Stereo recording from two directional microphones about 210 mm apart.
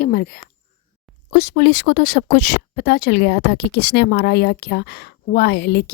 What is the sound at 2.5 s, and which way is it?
A woman's voice, 50° left (ahead or behind).